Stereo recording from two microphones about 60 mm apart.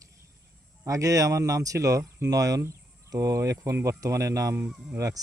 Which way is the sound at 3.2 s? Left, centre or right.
Right.